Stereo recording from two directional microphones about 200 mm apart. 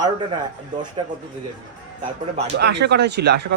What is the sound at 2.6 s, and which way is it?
Speech, 55° right (ahead or behind).